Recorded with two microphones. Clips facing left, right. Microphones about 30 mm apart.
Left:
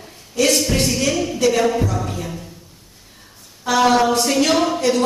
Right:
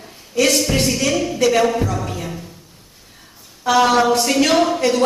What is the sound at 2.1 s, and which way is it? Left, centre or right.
Music, centre.